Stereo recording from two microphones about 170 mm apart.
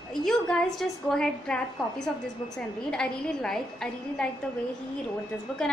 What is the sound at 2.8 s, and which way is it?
A woman's voice, 5° left (ahead or behind).